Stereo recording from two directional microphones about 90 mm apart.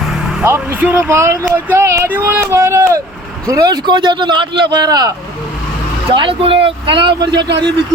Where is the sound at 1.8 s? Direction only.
30° right (ahead or behind).